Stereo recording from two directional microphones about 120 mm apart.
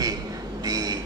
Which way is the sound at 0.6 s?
30° right (ahead or behind).